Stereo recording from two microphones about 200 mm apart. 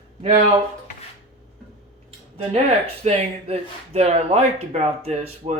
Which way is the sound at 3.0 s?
30° right (ahead or behind).